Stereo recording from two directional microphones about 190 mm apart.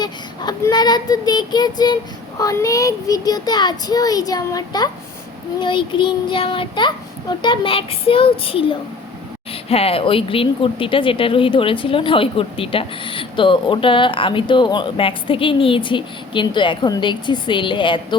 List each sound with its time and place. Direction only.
0.0 s speech: 20° left (ahead or behind)